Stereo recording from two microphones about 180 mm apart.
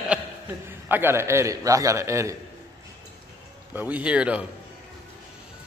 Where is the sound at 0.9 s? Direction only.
10° right (ahead or behind).